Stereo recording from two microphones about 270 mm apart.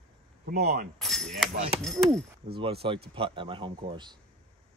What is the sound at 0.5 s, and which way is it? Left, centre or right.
Speech, right.